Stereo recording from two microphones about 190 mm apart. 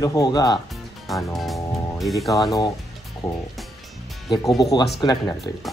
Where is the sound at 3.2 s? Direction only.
20° left (ahead or behind).